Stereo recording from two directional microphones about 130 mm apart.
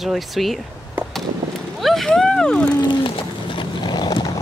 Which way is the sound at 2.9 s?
40° left (ahead or behind).